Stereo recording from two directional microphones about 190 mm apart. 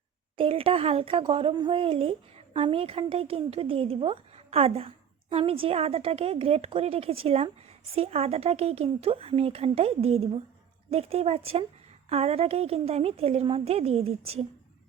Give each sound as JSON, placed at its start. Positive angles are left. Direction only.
{"t": 0.3, "sound": "speech", "side_deg": -30}